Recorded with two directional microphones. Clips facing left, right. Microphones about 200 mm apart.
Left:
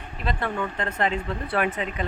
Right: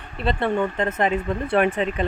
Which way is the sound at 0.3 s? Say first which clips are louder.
Right 6 dB; 25° right (ahead or behind).